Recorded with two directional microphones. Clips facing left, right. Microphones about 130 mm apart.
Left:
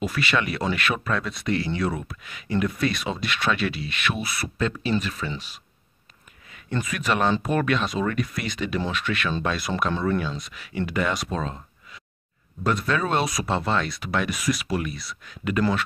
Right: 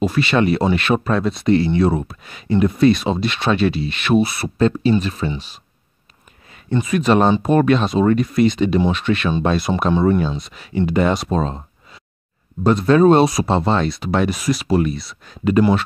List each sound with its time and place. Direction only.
0.0 s speech: 30° right (ahead or behind)
6.7 s speech: 25° right (ahead or behind)